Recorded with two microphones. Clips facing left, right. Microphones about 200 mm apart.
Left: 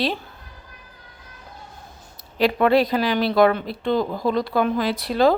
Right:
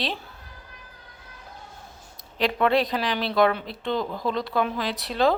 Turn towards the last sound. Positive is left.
turn(degrees=0)  # may be behind; listen again after turning